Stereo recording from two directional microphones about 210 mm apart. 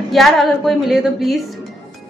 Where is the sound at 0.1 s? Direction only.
Centre (ahead or behind).